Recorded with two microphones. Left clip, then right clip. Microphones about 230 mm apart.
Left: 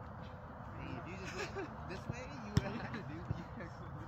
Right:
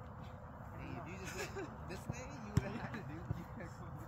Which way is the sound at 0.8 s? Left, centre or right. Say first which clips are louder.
Left 1 dB; centre.